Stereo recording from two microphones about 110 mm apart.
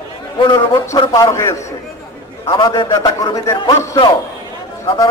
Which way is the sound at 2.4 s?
45° left (ahead or behind).